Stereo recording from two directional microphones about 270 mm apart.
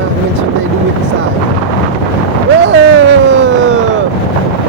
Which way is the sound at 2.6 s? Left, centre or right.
Right.